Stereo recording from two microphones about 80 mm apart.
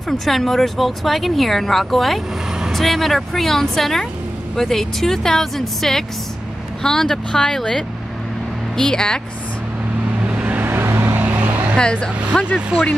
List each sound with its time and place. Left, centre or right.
0.1 s speech: centre
10.2 s vehicle: centre
11.1 s vehicle: right
11.7 s speech: centre
12.5 s speech: centre